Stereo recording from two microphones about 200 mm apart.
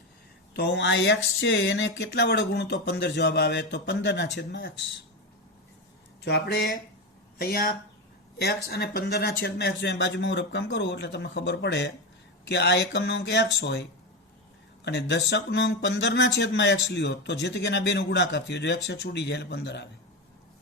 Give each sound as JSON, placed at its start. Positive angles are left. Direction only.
{"t": 0.5, "sound": "speech", "side_deg": 60}
{"t": 6.2, "sound": "speech", "side_deg": 55}
{"t": 14.8, "sound": "speech", "side_deg": 60}